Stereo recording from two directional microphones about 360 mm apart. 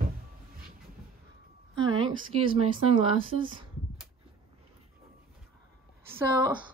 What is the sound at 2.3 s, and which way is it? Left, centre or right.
Speech, centre.